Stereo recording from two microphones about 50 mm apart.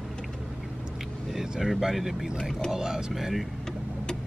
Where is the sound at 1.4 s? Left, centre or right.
Centre.